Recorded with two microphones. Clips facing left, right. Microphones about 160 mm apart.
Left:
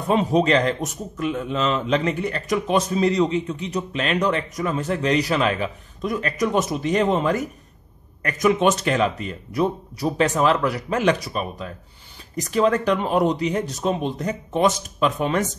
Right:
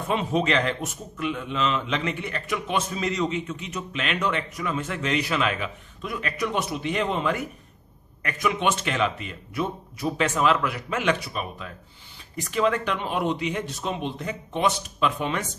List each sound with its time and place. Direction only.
0.1 s a man's voice: 35° left (ahead or behind)